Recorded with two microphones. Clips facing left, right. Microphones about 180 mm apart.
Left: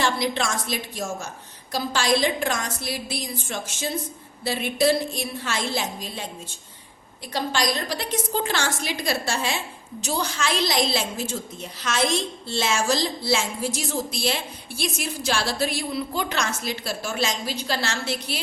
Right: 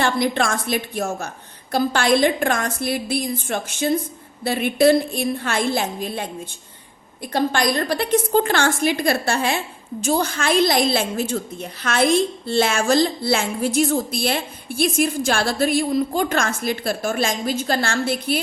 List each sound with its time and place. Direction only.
0.0 s a woman's voice: 55° right (ahead or behind)